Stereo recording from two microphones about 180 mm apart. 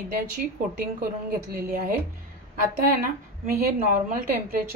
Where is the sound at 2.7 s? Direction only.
50° right (ahead or behind).